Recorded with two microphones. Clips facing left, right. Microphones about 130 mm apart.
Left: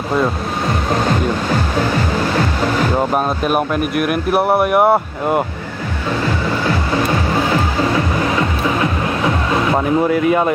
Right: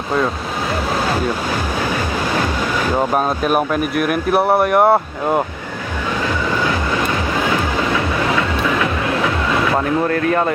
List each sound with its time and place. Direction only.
3.4 s speech: centre (ahead or behind)
7.9 s music: 30° left (ahead or behind)
10.0 s speech: 10° left (ahead or behind)